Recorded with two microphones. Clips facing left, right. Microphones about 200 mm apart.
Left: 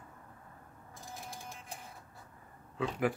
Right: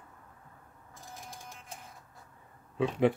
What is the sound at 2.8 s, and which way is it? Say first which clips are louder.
Speech: right 6 dB; 25° right (ahead or behind).